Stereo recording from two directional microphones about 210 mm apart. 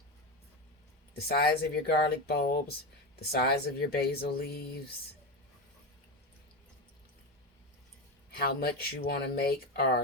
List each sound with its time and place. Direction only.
1.3 s speech: 50° left (ahead or behind)
8.4 s speech: 45° left (ahead or behind)